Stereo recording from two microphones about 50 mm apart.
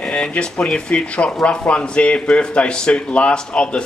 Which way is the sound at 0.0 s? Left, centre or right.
Centre.